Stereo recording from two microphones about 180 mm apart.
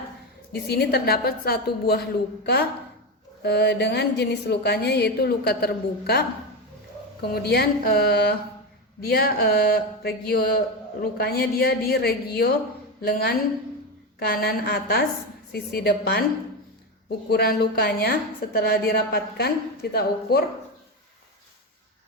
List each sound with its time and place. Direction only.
0.5 s a woman's voice: 60° left (ahead or behind)
3.4 s a woman's voice: 65° left (ahead or behind)
17.2 s a woman's voice: 60° left (ahead or behind)